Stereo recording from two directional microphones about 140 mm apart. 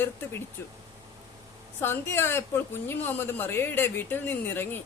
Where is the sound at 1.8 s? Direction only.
15° left (ahead or behind).